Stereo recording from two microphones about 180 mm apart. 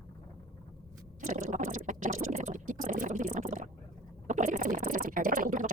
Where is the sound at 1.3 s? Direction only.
45° right (ahead or behind).